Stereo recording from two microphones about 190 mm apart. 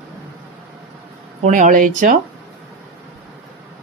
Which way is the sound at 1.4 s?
40° right (ahead or behind).